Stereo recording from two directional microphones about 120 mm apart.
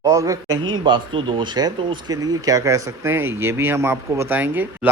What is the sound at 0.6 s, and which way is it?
Speech, 40° right (ahead or behind).